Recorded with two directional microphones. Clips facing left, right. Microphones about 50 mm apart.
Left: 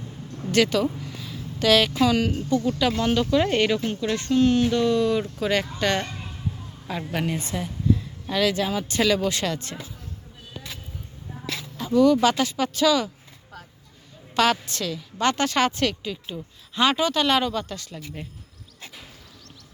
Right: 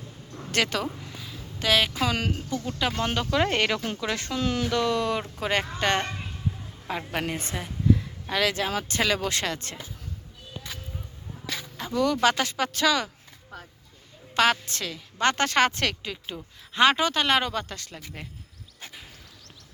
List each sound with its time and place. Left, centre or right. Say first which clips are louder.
0.5 s a woman's voice: left 6 dB; right
1.5 s a woman's voice: left 4 dB; right
2.0 s speech: left 6 dB; right
5.4 s speech: left 2 dB; right
7.1 s a woman's voice: left 5 dB; right
11.8 s a sound: left 5 dB; right
12.2 s a woman's voice: left 2 dB; right
14.3 s a woman's voice: left 1 dB; right